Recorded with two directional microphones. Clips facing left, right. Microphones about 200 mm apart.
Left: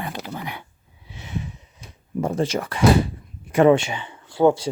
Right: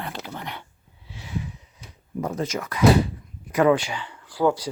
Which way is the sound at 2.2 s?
30° left (ahead or behind).